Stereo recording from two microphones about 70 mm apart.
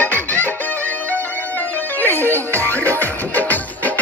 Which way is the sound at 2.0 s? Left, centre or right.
Left.